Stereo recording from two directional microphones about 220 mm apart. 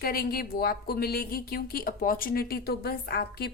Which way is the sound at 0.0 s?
45° left (ahead or behind).